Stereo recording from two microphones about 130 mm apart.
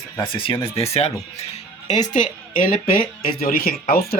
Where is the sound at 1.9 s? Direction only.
70° left (ahead or behind); by 2.7 s 90° left.